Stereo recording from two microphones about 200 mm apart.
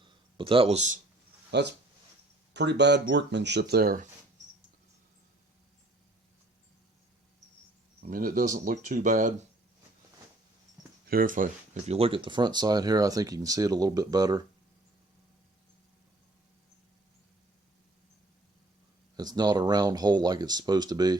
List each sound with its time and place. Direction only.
0.0 s a sound: 25° right (ahead or behind)
1.5 s speech: 60° right (ahead or behind)
8.0 s speech: 45° right (ahead or behind)
11.0 s speech: 45° right (ahead or behind); by 14.4 s 20° right (ahead or behind)
19.1 s speech: 20° right (ahead or behind)